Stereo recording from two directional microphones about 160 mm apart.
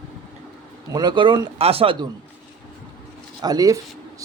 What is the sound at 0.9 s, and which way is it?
Speech, 25° right (ahead or behind).